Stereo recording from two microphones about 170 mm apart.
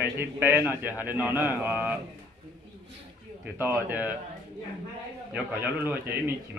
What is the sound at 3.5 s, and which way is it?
Speech, 10° right (ahead or behind).